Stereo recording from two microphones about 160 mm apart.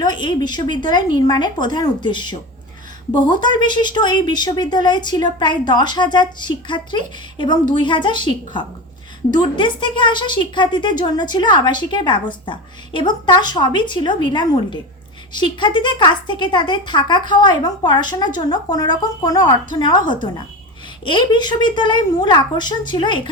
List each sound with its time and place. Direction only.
0.0 s a woman's voice: 30° left (ahead or behind)